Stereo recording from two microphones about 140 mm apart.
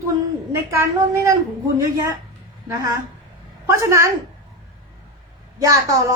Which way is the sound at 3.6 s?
20° right (ahead or behind).